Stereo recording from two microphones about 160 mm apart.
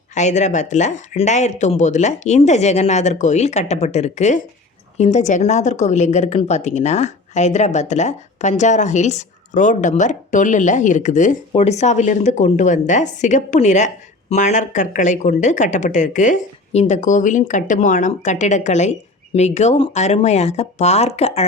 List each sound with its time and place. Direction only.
0.1 s speech: 45° left (ahead or behind)